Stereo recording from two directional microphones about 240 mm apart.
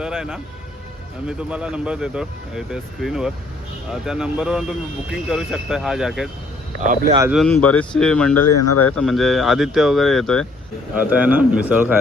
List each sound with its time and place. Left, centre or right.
0.0 s speech: centre
6.8 s speech: right
7.3 s speech: centre
8.4 s speech: left
8.9 s a man's voice: centre